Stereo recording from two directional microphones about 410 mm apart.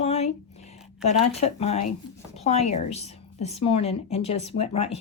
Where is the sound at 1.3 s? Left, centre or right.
Centre.